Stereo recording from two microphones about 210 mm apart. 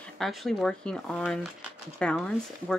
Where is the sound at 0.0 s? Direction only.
Centre (ahead or behind).